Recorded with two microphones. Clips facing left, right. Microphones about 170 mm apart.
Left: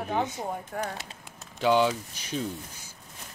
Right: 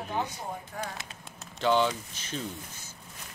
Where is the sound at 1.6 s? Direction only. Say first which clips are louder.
Left 2 dB; 10° left (ahead or behind).